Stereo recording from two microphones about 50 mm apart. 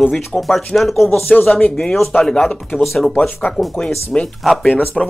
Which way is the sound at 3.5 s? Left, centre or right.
Centre.